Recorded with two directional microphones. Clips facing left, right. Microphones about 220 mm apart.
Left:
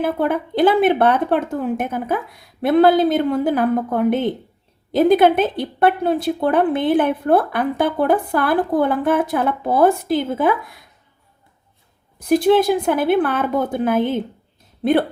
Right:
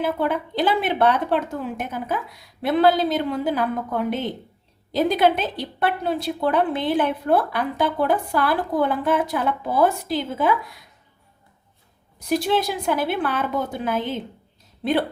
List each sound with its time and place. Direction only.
0.0 s a woman's voice: 55° left (ahead or behind)
12.3 s a woman's voice: 55° left (ahead or behind)